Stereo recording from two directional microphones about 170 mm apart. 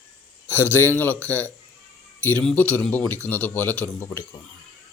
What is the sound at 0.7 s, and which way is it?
Speech, 10° left (ahead or behind).